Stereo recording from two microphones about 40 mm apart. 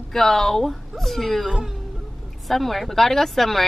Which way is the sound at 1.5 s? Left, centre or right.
Centre.